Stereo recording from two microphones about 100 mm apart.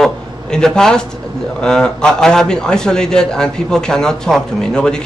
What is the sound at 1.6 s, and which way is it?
A man's voice, 5° left (ahead or behind).